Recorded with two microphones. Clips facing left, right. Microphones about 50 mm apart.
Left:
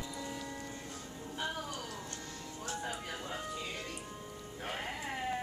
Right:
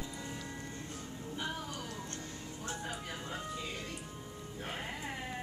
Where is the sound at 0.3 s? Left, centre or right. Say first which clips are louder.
Left 2 dB; centre.